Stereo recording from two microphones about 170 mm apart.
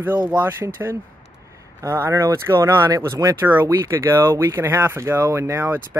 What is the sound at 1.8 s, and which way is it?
Speech, 15° right (ahead or behind).